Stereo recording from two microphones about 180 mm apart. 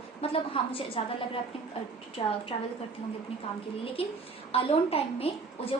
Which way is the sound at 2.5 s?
30° left (ahead or behind).